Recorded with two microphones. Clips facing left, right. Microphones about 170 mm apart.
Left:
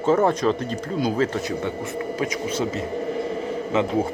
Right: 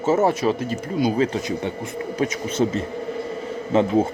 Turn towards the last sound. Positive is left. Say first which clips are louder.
# right 3 dB
turn(degrees=-30)  # may be behind; listen again after turning